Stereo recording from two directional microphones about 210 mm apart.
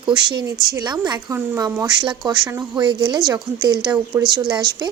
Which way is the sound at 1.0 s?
15° right (ahead or behind).